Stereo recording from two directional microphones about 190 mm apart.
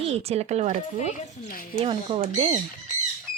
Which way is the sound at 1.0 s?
45° left (ahead or behind).